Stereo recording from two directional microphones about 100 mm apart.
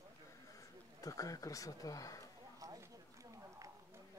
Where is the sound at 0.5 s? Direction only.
35° left (ahead or behind).